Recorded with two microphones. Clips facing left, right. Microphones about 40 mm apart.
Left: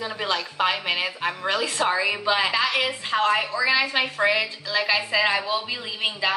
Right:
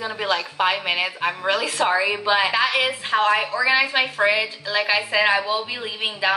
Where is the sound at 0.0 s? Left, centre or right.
Centre.